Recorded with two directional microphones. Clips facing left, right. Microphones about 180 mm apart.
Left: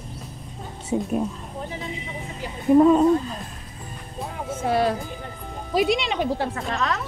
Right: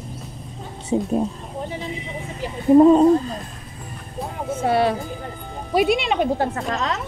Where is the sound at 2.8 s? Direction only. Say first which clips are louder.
Right 4 dB; 30° right (ahead or behind).